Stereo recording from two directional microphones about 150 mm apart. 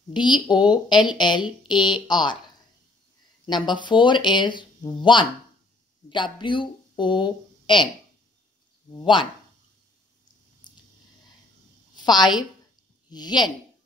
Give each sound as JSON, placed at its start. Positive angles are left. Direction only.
{"t": 0.1, "sound": "speech", "side_deg": 30}
{"t": 3.4, "sound": "speech", "side_deg": 30}
{"t": 9.0, "sound": "speech", "side_deg": 35}
{"t": 10.7, "sound": "a sound", "side_deg": 30}
{"t": 11.9, "sound": "a woman's voice", "side_deg": 30}